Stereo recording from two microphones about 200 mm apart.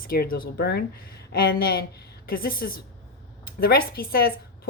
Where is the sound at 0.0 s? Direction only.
45° left (ahead or behind).